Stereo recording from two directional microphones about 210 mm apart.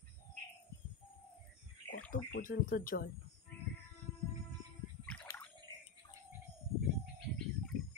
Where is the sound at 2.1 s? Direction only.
40° left (ahead or behind).